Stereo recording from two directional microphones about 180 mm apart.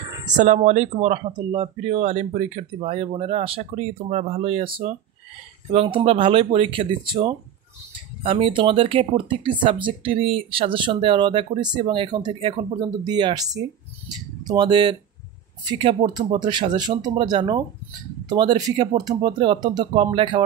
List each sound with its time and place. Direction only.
0.3 s speech: 45° right (ahead or behind); by 20.4 s 25° right (ahead or behind)